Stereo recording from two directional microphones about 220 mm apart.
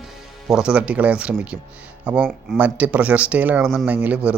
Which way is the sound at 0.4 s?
5° right (ahead or behind).